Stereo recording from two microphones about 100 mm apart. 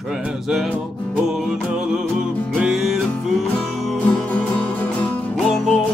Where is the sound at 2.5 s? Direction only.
Centre (ahead or behind).